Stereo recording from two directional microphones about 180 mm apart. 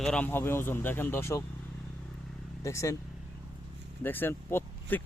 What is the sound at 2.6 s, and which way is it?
Speech, 15° left (ahead or behind).